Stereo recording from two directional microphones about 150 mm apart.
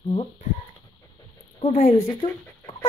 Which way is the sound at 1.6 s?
45° left (ahead or behind).